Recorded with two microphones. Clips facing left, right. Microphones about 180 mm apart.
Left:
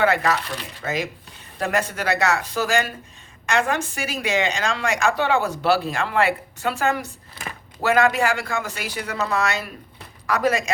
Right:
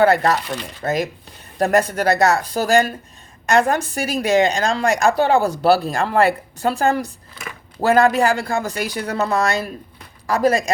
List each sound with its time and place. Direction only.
0.0 s a woman's voice: 40° right (ahead or behind)